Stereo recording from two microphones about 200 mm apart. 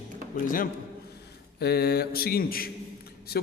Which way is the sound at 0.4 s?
45° left (ahead or behind).